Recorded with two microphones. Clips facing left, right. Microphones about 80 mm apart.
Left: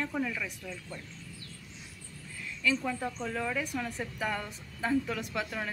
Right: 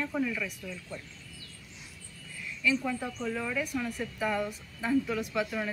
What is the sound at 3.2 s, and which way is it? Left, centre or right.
Speech, left.